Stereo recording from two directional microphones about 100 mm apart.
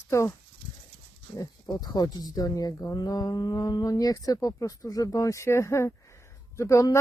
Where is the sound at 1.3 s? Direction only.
40° left (ahead or behind).